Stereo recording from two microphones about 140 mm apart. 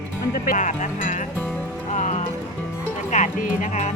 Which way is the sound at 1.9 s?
55° left (ahead or behind).